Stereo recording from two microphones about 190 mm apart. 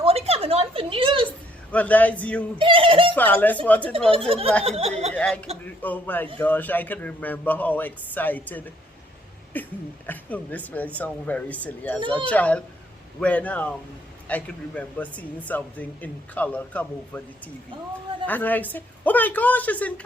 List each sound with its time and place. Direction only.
0.0 s a sound: 30° right (ahead or behind)
1.7 s speech: 10° left (ahead or behind)
2.6 s speech: 25° right (ahead or behind)
3.2 s speech: 10° left (ahead or behind)
4.3 s speech: 30° right (ahead or behind)
5.1 s speech: 5° left (ahead or behind)
18.3 s speech: 10° left (ahead or behind)